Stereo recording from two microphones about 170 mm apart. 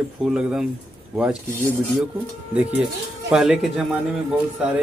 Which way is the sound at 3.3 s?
5° right (ahead or behind).